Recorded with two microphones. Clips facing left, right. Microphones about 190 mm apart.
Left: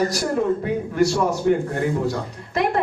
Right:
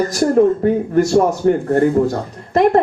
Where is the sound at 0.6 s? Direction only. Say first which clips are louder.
Right 5 dB; 50° right (ahead or behind).